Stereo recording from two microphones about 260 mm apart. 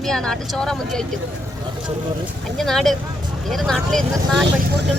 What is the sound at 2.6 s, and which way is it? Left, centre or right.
Speech, centre.